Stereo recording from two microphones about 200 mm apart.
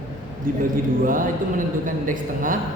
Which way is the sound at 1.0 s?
45° right (ahead or behind).